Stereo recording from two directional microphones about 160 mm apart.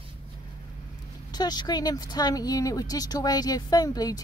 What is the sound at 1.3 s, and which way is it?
Speech, 25° left (ahead or behind).